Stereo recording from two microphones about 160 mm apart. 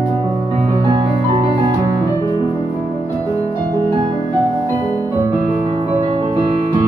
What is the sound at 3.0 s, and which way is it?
Music, 20° right (ahead or behind).